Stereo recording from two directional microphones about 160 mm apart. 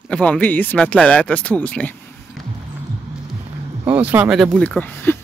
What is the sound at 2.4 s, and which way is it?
Music, centre (ahead or behind).